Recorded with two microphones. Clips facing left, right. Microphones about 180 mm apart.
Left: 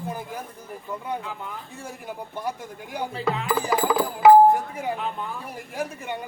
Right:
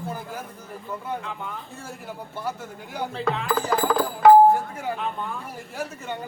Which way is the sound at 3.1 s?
5° left (ahead or behind).